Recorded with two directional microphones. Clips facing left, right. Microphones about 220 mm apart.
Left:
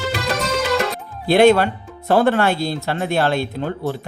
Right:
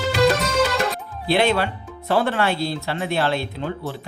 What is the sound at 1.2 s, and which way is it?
Speech, 45° left (ahead or behind).